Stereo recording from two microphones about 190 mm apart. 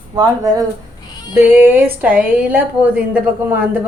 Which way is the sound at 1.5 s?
10° right (ahead or behind).